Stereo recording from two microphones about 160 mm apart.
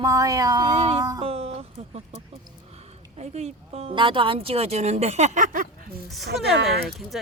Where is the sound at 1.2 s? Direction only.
40° right (ahead or behind).